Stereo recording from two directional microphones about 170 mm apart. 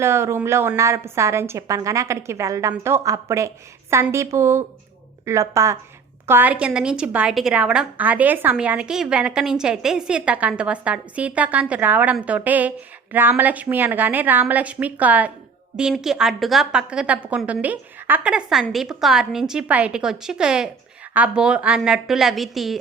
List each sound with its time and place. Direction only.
0.0 s a woman's voice: 15° right (ahead or behind)